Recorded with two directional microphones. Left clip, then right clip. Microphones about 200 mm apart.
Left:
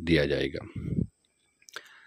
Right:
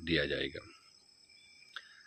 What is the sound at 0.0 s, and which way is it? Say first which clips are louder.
Speech: left 7 dB; 55° left (ahead or behind).